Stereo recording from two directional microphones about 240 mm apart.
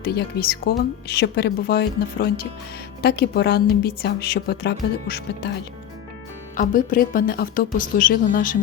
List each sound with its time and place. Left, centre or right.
0.1 s speech: left
6.6 s speech: left